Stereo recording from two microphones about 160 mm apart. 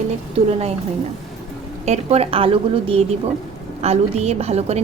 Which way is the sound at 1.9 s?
40° right (ahead or behind).